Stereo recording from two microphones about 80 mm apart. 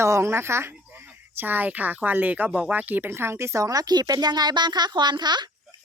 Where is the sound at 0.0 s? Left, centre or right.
Right.